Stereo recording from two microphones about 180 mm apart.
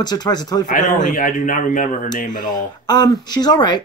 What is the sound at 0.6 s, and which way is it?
Speech, 45° left (ahead or behind).